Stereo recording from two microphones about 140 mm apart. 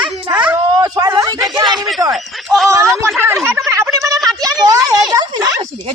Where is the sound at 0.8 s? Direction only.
25° right (ahead or behind).